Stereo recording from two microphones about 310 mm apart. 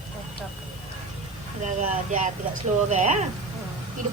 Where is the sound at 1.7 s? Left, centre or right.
Right.